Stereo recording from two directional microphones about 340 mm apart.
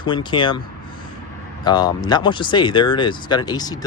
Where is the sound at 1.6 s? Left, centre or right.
Centre.